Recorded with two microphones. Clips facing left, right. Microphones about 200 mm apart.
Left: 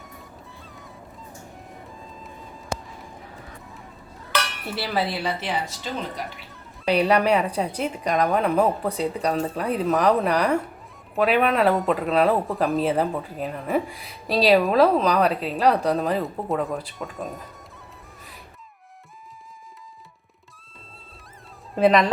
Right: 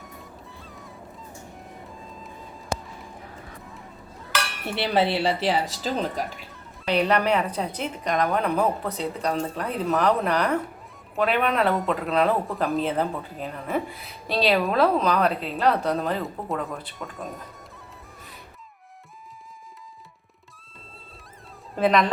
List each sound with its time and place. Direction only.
1.9 s music: centre (ahead or behind)
4.6 s speech: 25° right (ahead or behind)
6.9 s a woman's voice: 10° left (ahead or behind)
21.8 s speech: centre (ahead or behind)